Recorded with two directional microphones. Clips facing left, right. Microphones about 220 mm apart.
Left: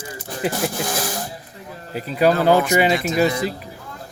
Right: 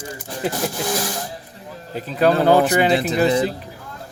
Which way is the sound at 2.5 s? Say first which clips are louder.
Right 2 dB; 35° right (ahead or behind).